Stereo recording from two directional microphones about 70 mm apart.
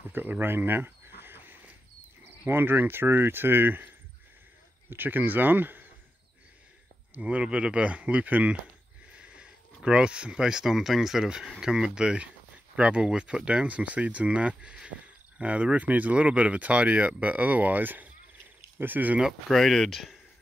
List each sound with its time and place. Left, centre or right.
0.1 s cricket: right
2.4 s speech: right
7.2 s speech: centre
19.2 s speech: centre